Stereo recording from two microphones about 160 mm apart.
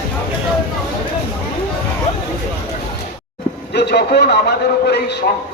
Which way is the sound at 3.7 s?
90° left.